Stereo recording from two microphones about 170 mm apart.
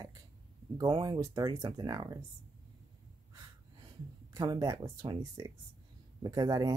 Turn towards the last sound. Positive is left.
turn(degrees=-20)  # may be behind; listen again after turning